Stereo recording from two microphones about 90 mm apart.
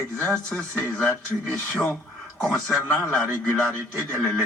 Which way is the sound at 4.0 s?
15° left (ahead or behind).